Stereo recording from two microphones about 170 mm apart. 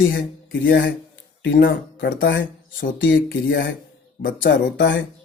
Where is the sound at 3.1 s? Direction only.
70° left (ahead or behind).